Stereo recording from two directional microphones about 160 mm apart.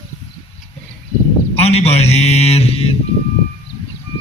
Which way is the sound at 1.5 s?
40° left (ahead or behind).